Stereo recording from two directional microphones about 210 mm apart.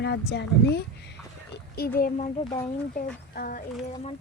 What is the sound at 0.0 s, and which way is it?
A child's voice, 55° left (ahead or behind).